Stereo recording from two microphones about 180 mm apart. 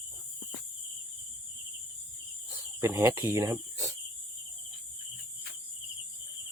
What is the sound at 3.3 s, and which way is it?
Cricket, 20° right (ahead or behind).